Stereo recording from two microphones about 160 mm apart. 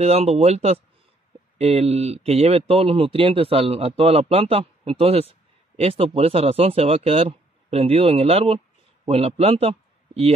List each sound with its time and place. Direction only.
0.0 s speech: 40° right (ahead or behind)